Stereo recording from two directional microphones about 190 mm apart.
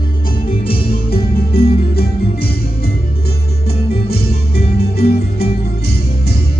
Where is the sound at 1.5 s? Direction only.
55° left (ahead or behind).